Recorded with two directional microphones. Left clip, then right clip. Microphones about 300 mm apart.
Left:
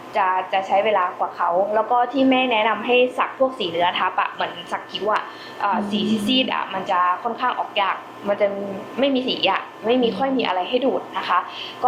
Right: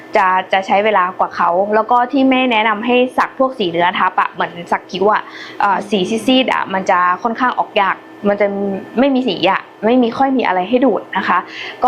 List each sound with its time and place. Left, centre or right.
0.1 s a woman's voice: right